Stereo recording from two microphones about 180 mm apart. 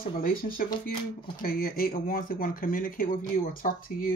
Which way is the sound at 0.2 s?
50° left (ahead or behind).